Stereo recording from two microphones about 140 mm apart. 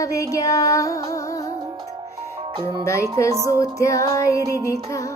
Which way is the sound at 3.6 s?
25° left (ahead or behind).